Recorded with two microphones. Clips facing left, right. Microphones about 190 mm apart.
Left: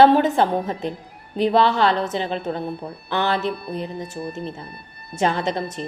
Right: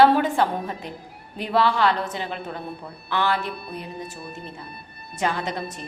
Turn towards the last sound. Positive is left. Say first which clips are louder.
# left 5 dB
turn(degrees=25)  # may be behind; listen again after turning